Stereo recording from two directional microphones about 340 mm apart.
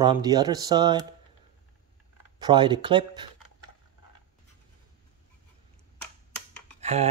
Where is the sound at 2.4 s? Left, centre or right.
Centre.